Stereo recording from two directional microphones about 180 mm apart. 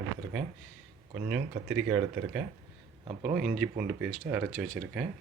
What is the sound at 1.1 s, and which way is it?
Speech, 5° right (ahead or behind).